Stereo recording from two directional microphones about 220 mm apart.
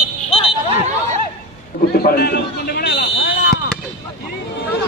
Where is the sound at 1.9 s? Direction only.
45° left (ahead or behind).